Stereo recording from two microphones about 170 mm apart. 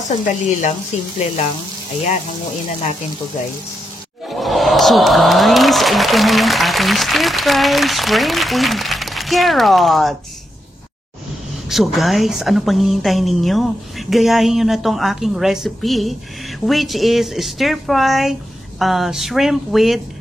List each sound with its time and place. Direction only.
0.0 s speech: 45° left (ahead or behind)
4.3 s a woman's voice: centre (ahead or behind)
11.7 s a woman's voice: centre (ahead or behind)